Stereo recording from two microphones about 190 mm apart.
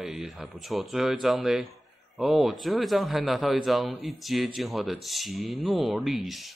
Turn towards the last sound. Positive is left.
turn(degrees=0)  # may be behind; listen again after turning